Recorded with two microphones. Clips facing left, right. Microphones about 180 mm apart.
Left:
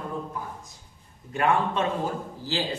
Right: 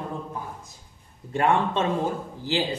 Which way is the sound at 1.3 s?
30° right (ahead or behind).